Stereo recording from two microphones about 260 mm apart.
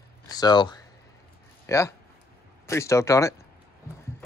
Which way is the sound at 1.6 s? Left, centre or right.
Centre.